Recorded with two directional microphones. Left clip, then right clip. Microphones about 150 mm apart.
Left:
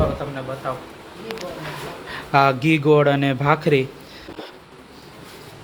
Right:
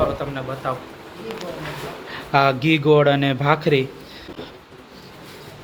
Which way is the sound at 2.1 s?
15° left (ahead or behind).